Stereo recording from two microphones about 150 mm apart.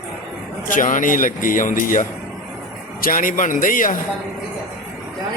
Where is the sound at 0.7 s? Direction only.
60° left (ahead or behind).